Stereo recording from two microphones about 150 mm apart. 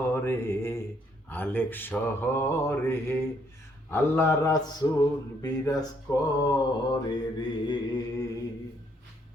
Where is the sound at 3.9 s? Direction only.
15° left (ahead or behind).